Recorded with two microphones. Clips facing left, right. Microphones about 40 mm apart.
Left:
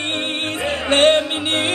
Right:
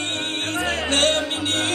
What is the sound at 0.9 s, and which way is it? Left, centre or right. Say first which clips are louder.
Music: left 8 dB; left.